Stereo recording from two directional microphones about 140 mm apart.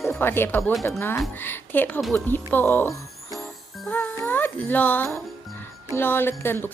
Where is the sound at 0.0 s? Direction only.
15° left (ahead or behind).